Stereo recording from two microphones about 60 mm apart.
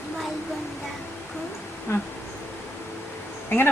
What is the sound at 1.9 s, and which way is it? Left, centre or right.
Bee, left.